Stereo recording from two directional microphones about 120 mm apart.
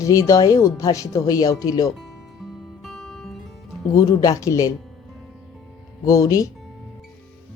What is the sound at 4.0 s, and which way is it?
Speech, 30° left (ahead or behind).